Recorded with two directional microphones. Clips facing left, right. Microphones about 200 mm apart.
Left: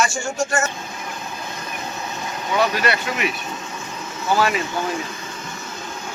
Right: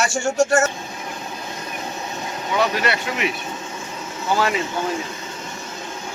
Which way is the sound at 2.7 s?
25° right (ahead or behind).